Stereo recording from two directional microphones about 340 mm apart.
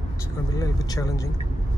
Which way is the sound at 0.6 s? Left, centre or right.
Centre.